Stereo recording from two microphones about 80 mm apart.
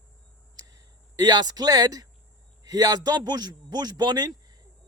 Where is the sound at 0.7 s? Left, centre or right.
Right.